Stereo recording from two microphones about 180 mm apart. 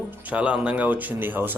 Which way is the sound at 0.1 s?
10° right (ahead or behind).